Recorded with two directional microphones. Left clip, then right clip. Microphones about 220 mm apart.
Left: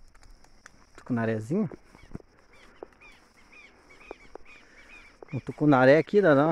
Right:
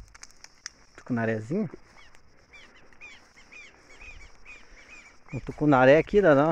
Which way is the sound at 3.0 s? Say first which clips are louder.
Right 5 dB; 45° right (ahead or behind).